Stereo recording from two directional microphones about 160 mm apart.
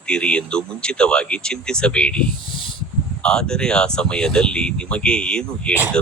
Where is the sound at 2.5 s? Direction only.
30° left (ahead or behind).